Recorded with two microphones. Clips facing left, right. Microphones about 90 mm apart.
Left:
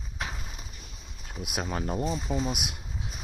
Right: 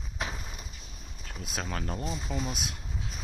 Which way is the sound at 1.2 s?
15° left (ahead or behind).